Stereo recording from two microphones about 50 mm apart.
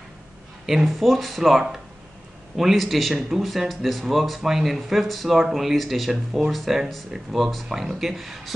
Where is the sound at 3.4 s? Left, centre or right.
Centre.